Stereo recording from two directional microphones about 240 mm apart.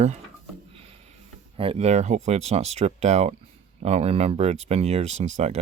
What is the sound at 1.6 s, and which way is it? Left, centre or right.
Speech, right.